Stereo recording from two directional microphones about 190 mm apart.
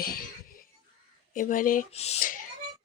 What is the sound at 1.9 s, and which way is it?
Speech, 35° left (ahead or behind).